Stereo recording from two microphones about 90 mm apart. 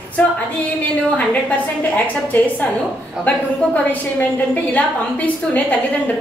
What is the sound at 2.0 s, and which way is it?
A woman's voice, 20° left (ahead or behind).